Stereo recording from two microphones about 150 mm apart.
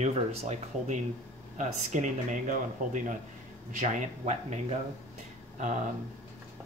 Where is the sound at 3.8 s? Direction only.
50° right (ahead or behind).